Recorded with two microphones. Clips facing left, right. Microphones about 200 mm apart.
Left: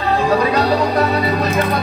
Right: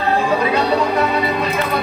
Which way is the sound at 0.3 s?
40° left (ahead or behind).